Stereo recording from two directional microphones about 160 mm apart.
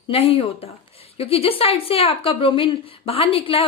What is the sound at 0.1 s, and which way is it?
A woman's voice, 35° left (ahead or behind).